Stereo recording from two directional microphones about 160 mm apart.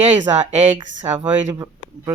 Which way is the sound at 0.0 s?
45° right (ahead or behind).